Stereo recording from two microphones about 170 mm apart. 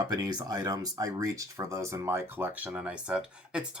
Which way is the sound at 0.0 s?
20° right (ahead or behind).